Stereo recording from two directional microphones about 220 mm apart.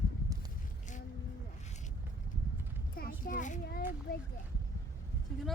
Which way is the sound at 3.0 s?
40° left (ahead or behind).